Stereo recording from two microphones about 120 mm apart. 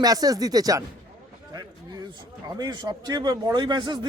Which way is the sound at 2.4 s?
35° right (ahead or behind).